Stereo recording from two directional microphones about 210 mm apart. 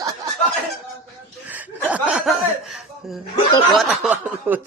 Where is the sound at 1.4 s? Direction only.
5° right (ahead or behind).